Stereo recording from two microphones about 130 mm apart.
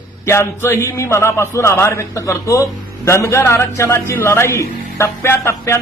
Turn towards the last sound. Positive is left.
turn(degrees=20)  # may be behind; listen again after turning